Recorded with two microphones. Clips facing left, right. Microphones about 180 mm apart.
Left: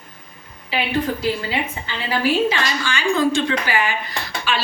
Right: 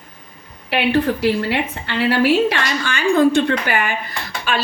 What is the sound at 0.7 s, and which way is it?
A woman's voice, 70° right (ahead or behind).